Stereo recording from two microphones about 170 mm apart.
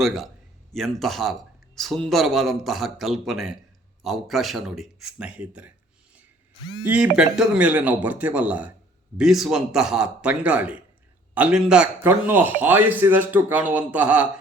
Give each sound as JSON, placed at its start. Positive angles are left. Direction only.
{"t": 0.0, "sound": "speech", "side_deg": 0}
{"t": 6.8, "sound": "a man's voice", "side_deg": -10}